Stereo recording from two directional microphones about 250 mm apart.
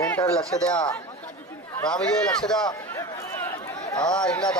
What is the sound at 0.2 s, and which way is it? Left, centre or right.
Speech, left.